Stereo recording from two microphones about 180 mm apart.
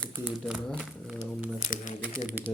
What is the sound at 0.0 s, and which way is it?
Crumpling, 10° right (ahead or behind).